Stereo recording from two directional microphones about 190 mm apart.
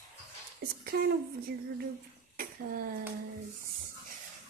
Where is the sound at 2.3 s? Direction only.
45° right (ahead or behind).